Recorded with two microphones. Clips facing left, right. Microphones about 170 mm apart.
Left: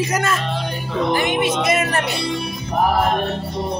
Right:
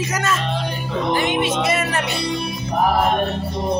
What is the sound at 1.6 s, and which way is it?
Speech, 45° left (ahead or behind).